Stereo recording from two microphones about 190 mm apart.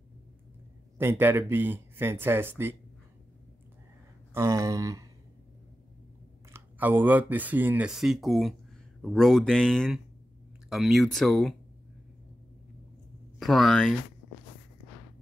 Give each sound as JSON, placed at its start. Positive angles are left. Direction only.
{"t": 0.9, "sound": "speech", "side_deg": -10}
{"t": 4.3, "sound": "speech", "side_deg": -15}
{"t": 6.5, "sound": "speech", "side_deg": -10}
{"t": 13.4, "sound": "speech", "side_deg": 0}